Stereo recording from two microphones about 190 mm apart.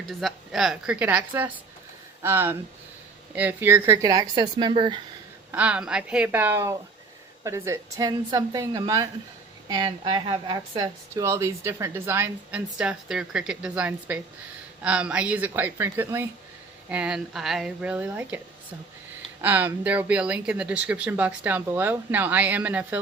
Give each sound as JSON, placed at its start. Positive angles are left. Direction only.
{"t": 0.0, "sound": "speech", "side_deg": 0}
{"t": 5.5, "sound": "speech", "side_deg": -5}
{"t": 19.4, "sound": "speech", "side_deg": -10}